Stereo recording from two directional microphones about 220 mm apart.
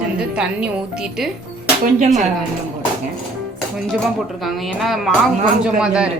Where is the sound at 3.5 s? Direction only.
Centre (ahead or behind).